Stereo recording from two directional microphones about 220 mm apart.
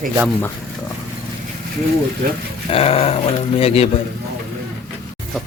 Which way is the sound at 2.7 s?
25° left (ahead or behind).